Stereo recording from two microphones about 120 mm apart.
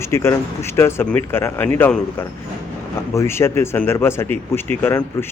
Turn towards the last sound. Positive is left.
turn(degrees=20)  # may be behind; listen again after turning